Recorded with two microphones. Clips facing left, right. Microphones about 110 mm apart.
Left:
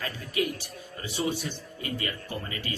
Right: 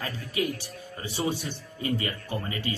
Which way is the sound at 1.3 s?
30° right (ahead or behind).